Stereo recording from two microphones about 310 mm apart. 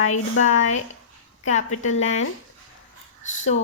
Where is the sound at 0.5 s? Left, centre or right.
Left.